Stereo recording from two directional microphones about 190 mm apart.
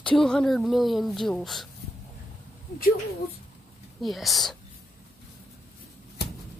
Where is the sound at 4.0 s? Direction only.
Centre (ahead or behind).